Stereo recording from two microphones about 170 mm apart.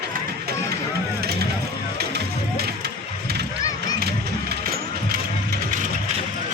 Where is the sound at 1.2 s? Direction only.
70° right (ahead or behind).